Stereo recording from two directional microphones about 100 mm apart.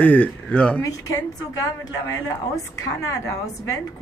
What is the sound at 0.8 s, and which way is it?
Speech, 35° left (ahead or behind).